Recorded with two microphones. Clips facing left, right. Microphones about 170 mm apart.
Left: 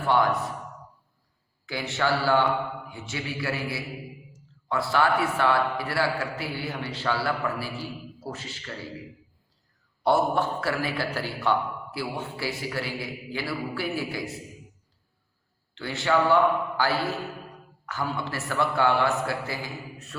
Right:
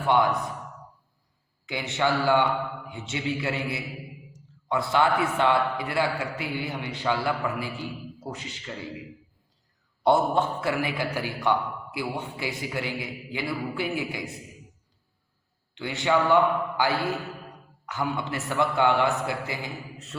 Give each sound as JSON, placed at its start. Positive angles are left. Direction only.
{"t": 1.6, "sound": "a man's voice", "side_deg": -20}
{"t": 10.0, "sound": "a man's voice", "side_deg": -20}
{"t": 15.7, "sound": "a man's voice", "side_deg": -15}